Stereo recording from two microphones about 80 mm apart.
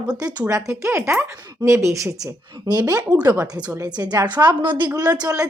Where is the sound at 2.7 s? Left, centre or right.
Right.